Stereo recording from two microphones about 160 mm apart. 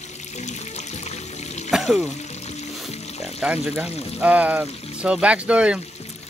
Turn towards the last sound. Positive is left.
turn(degrees=-5)  # may be behind; listen again after turning